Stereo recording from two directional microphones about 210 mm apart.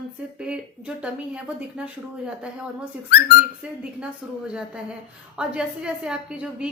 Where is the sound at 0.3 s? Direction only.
5° right (ahead or behind).